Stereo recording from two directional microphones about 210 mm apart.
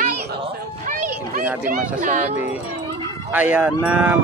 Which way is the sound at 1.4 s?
10° right (ahead or behind).